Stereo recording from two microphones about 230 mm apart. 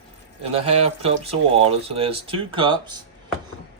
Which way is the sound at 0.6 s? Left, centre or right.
Right.